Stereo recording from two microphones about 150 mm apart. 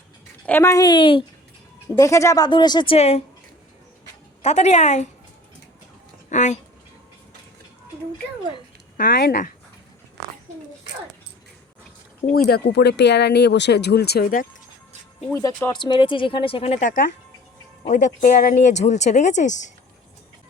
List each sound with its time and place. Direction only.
0.4 s speech: 15° left (ahead or behind); by 1.2 s 35° left (ahead or behind)
2.0 s speech: 20° left (ahead or behind); by 3.2 s 40° left (ahead or behind)
4.4 s speech: 50° left (ahead or behind)
6.3 s speech: 50° left (ahead or behind)
9.0 s speech: 80° left
12.5 s speech: 90° left
15.3 s speech: 20° left (ahead or behind); by 19.7 s 55° left (ahead or behind)